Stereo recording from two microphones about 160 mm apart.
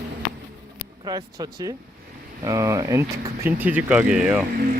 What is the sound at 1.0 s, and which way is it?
Speech, 25° right (ahead or behind).